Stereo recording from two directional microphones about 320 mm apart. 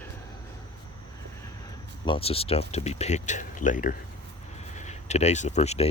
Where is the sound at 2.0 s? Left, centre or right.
Centre.